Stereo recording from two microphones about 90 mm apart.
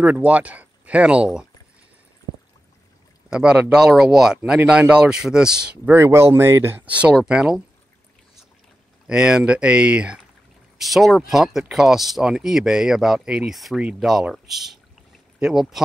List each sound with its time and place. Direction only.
0.0 s speech: 15° right (ahead or behind)
3.3 s speech: 10° right (ahead or behind)
5.9 s speech: 30° right (ahead or behind)
6.9 s speech: 15° right (ahead or behind)
9.0 s speech: 10° right (ahead or behind)
10.8 s speech: centre (ahead or behind)